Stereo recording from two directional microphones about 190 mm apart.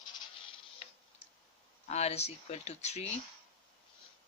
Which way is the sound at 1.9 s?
35° left (ahead or behind).